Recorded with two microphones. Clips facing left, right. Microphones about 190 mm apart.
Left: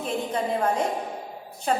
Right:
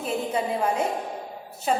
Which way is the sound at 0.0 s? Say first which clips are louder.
Right 1 dB; 10° right (ahead or behind).